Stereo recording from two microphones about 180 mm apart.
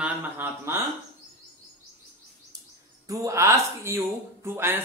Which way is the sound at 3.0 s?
15° right (ahead or behind).